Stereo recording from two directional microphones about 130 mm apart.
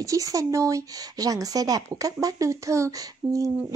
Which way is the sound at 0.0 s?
25° right (ahead or behind).